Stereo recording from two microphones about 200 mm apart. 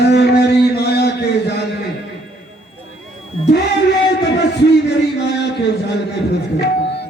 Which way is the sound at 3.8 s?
60° left (ahead or behind).